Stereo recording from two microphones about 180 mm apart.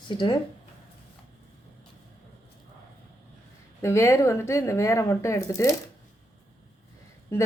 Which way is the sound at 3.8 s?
15° left (ahead or behind).